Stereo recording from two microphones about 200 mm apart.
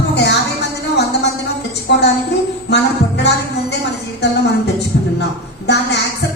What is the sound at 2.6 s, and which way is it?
Music, 55° left (ahead or behind).